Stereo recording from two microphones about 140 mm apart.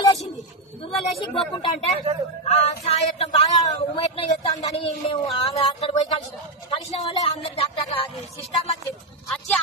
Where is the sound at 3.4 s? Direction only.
25° left (ahead or behind).